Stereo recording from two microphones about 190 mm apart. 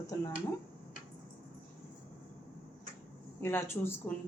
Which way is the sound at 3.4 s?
15° left (ahead or behind).